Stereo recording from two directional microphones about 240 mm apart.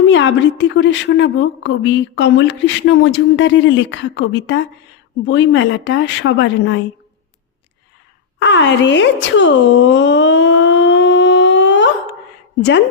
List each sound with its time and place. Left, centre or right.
0.1 s a woman's voice: left
8.4 s speech: left